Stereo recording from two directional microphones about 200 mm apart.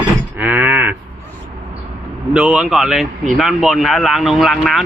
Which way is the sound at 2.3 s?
5° right (ahead or behind).